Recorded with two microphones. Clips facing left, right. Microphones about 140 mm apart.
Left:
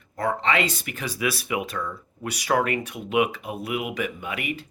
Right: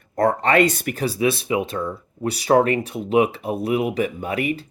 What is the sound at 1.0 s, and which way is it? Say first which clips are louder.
Speech: right 7 dB; 30° right (ahead or behind).